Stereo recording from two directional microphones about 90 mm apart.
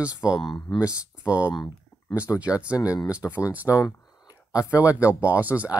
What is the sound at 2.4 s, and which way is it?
Speech, 15° right (ahead or behind).